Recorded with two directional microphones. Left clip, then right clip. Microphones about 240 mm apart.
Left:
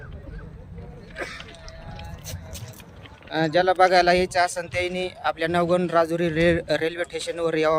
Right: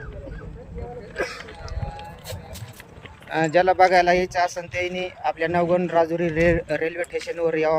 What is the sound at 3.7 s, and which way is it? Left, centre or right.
A man's voice, centre.